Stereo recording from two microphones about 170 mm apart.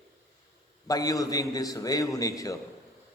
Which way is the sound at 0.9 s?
20° left (ahead or behind).